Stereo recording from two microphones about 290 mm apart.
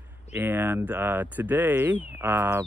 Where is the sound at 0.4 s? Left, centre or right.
Centre.